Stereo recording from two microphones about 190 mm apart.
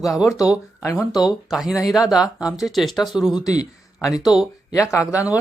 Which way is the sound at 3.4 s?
20° left (ahead or behind).